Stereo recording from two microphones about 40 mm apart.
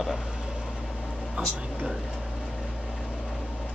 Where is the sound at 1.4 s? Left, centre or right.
Right.